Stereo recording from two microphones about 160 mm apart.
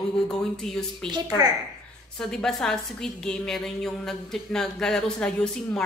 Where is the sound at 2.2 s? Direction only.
5° left (ahead or behind).